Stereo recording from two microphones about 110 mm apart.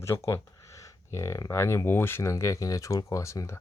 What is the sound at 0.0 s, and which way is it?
Speech, 25° left (ahead or behind).